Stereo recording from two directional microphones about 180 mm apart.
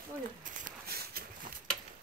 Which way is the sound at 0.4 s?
55° right (ahead or behind).